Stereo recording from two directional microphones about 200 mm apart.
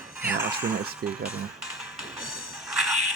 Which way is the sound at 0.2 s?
10° right (ahead or behind).